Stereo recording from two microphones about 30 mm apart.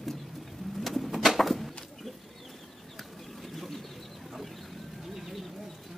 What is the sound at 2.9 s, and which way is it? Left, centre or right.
Bird, centre.